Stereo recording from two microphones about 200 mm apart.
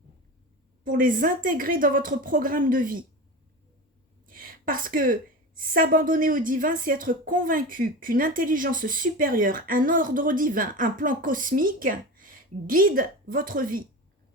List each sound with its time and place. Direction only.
0.9 s a woman's voice: 45° right (ahead or behind)
4.3 s a woman's voice: 45° right (ahead or behind)